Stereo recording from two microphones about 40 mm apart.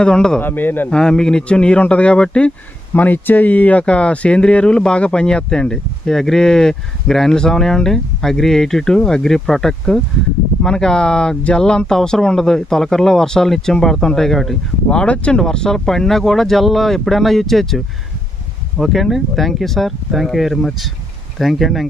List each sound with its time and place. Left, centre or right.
0.0 s speech: centre
0.4 s speech: left
0.8 s speech: centre
2.1 s speech: centre
3.0 s speech: left
3.8 s speech: left; by 14.6 s centre
14.9 s speech: left; by 21.8 s centre